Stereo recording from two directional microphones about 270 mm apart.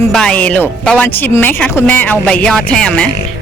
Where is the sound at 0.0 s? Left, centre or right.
Centre.